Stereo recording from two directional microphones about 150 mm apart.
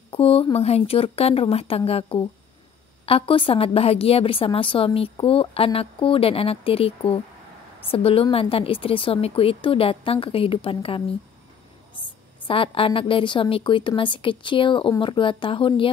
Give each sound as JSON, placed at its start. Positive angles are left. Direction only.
{"t": 0.1, "sound": "a woman's voice", "side_deg": 40}